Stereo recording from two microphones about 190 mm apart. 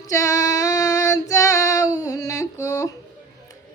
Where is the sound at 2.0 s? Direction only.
20° left (ahead or behind).